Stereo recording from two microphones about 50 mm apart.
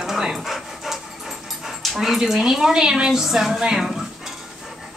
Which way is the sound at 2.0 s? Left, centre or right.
Centre.